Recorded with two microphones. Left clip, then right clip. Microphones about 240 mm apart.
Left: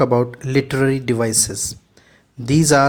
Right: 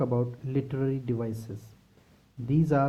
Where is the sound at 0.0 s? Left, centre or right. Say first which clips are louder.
Left 13 dB; left.